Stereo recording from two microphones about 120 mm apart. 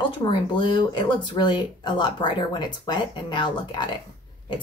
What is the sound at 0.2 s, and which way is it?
Speech, 40° left (ahead or behind).